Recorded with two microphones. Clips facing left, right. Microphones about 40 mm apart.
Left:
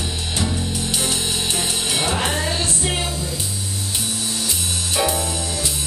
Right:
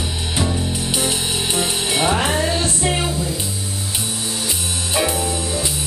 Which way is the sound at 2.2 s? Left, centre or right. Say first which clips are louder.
Right 3 dB; centre.